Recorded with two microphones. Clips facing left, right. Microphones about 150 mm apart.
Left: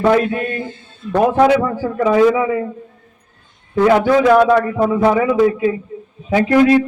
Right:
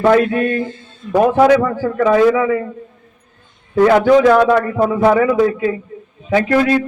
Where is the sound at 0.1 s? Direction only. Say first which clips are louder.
Right 3 dB; 15° left (ahead or behind).